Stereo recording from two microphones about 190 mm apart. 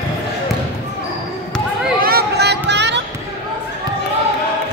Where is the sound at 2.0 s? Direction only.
55° right (ahead or behind).